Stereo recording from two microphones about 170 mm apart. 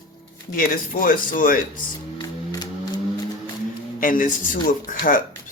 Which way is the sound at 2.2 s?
25° left (ahead or behind).